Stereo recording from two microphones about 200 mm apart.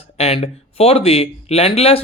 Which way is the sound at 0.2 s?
30° left (ahead or behind).